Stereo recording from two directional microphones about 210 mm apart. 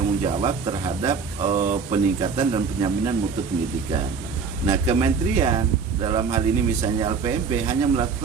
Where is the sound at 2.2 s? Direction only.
25° right (ahead or behind).